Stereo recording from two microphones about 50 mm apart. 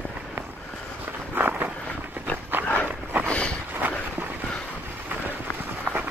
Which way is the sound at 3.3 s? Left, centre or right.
Left.